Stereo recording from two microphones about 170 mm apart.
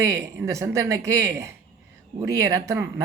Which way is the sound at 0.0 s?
15° right (ahead or behind).